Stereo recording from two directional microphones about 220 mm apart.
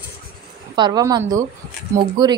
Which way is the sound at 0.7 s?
20° right (ahead or behind).